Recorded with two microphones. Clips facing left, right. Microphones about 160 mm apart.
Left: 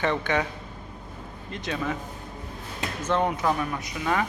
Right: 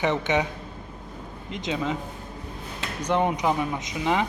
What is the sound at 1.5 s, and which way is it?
Speech, 15° right (ahead or behind).